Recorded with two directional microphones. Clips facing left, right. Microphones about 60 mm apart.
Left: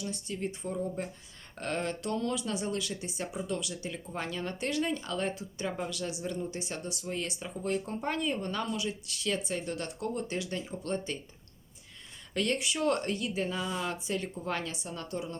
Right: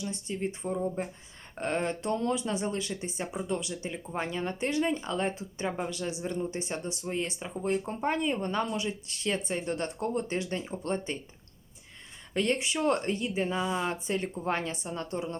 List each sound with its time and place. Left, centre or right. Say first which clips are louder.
0.0 s speech: right 2 dB; right
12.3 s speech: right 2 dB; right